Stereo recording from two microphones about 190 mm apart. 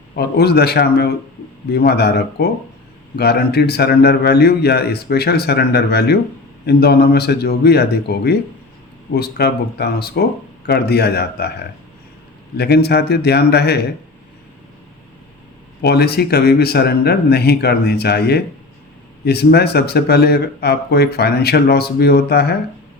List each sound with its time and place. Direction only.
0.2 s speech: 55° left (ahead or behind)
12.5 s speech: 60° left (ahead or behind)
15.8 s speech: 60° left (ahead or behind)